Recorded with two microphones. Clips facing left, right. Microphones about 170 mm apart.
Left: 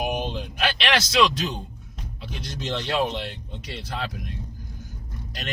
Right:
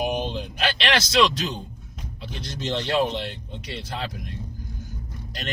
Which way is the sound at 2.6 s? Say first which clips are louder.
Right 2 dB; 35° right (ahead or behind).